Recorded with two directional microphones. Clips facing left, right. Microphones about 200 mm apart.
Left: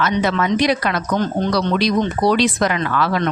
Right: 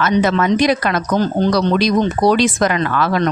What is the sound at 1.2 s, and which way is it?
Speech, 35° right (ahead or behind).